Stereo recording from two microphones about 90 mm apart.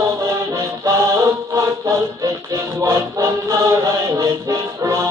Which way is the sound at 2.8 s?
35° right (ahead or behind).